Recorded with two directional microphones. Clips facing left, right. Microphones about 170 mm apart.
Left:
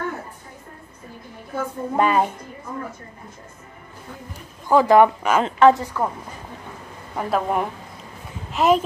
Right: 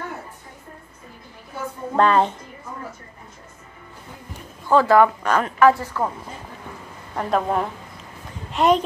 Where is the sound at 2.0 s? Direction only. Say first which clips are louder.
Right 2 dB; 10° left (ahead or behind).